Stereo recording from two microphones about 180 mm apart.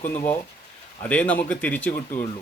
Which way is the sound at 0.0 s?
15° left (ahead or behind).